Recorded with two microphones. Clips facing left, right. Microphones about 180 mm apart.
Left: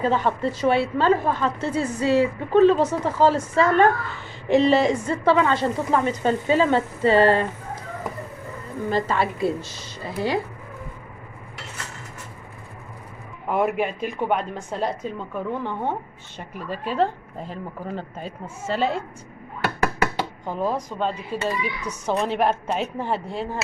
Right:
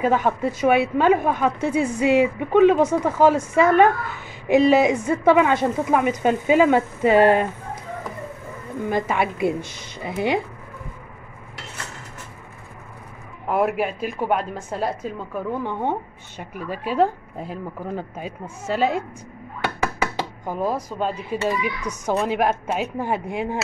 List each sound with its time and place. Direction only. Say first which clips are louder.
0.0 s a woman's voice: right 2 dB; 10° right (ahead or behind)
8.8 s a woman's voice: even; 15° right (ahead or behind)
13.5 s a woman's voice: right 1 dB; 5° right (ahead or behind)
20.4 s a woman's voice: right 1 dB; 10° right (ahead or behind)